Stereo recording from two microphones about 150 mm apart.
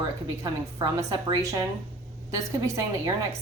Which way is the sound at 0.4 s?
30° right (ahead or behind).